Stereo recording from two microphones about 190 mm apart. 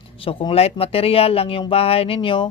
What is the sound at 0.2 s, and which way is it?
Speech, 30° left (ahead or behind).